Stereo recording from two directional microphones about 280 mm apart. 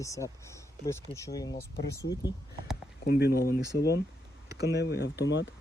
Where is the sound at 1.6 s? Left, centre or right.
Left.